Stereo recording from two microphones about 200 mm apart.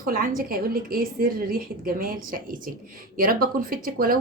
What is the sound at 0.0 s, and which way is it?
A woman's voice, 45° right (ahead or behind).